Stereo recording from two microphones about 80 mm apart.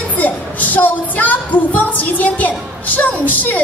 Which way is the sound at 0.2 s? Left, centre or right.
Left.